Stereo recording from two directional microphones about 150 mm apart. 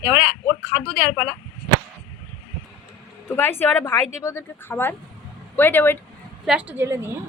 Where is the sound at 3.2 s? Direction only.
15° left (ahead or behind).